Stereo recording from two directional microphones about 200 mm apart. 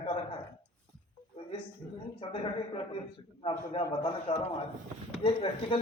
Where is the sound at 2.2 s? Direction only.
25° left (ahead or behind).